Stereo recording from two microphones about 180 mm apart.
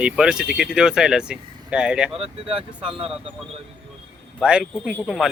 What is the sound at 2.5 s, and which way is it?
Speech, 30° right (ahead or behind).